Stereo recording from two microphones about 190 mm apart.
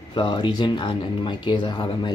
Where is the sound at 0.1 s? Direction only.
25° left (ahead or behind).